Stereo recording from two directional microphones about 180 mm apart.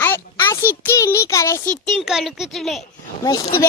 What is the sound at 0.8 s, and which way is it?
Child singing, 10° left (ahead or behind).